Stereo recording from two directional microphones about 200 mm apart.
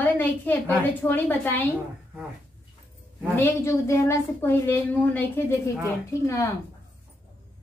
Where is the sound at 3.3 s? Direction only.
15° left (ahead or behind).